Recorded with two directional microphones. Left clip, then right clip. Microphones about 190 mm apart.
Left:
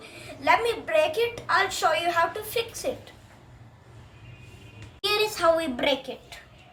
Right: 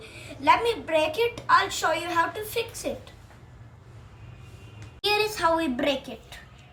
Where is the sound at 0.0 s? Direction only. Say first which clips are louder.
Right 3 dB; 15° left (ahead or behind).